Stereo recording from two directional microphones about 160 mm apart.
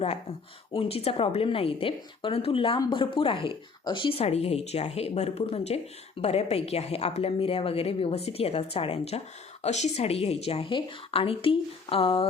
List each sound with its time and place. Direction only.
0.0 s a woman's voice: 40° left (ahead or behind)